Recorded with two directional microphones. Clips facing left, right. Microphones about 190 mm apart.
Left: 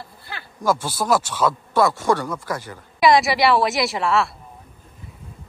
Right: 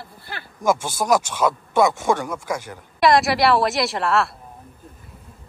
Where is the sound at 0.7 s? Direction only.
20° right (ahead or behind).